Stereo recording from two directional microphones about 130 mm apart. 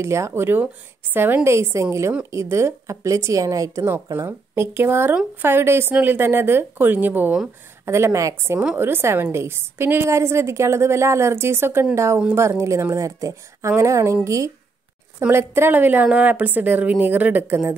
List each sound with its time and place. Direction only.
0.0 s a woman's voice: 20° right (ahead or behind)